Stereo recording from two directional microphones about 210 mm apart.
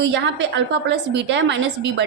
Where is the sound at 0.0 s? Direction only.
60° right (ahead or behind).